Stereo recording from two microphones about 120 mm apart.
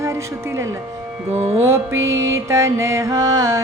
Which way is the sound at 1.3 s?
55° right (ahead or behind).